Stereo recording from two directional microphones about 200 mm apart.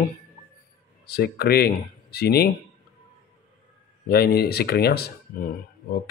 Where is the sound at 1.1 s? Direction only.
50° left (ahead or behind).